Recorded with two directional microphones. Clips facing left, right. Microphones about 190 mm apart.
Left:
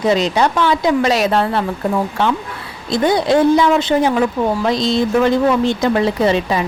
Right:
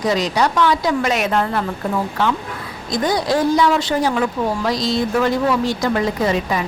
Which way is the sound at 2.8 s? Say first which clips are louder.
Left 4 dB; 25° left (ahead or behind).